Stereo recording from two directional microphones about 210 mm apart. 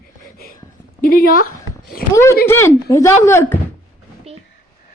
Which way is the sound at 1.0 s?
45° left (ahead or behind).